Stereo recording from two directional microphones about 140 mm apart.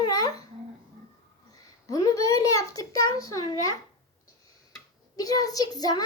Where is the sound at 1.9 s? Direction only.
25° left (ahead or behind).